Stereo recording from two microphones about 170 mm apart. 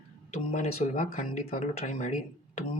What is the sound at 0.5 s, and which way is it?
Speech, 45° left (ahead or behind).